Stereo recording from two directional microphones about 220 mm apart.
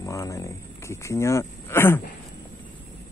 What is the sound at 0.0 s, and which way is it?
Speech, 15° left (ahead or behind).